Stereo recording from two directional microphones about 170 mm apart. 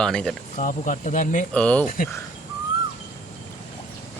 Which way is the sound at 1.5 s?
5° left (ahead or behind).